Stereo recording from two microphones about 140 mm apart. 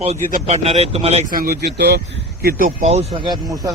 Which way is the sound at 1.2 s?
90° right.